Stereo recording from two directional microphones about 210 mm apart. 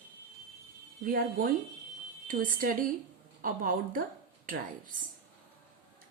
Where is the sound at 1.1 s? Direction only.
40° right (ahead or behind).